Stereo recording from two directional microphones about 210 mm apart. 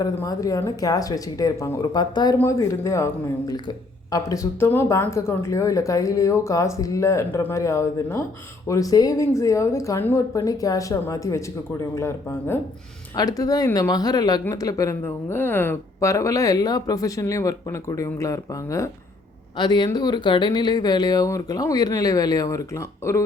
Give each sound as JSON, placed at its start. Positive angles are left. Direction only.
{"t": 0.0, "sound": "speech", "side_deg": 15}
{"t": 4.1, "sound": "speech", "side_deg": 15}